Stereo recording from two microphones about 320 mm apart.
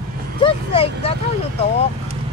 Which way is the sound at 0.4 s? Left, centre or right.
Centre.